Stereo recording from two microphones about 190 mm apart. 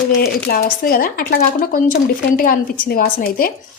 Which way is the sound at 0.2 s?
55° left (ahead or behind).